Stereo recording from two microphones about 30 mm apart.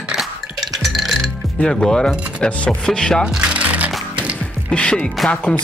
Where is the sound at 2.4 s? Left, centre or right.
Left.